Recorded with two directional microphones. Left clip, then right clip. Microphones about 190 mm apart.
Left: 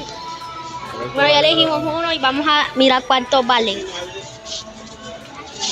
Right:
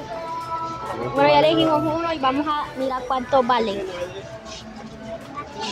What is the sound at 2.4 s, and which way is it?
Speech, 20° left (ahead or behind).